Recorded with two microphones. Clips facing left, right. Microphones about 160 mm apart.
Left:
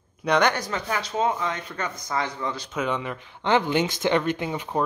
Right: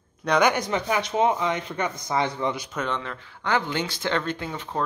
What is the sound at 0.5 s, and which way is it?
Speech, 20° right (ahead or behind).